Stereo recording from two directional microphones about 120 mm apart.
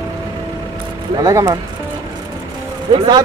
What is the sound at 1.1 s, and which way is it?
Speech, 30° right (ahead or behind).